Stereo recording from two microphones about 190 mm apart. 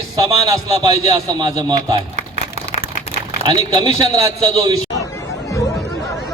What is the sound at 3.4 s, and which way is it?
A man's voice, 20° right (ahead or behind).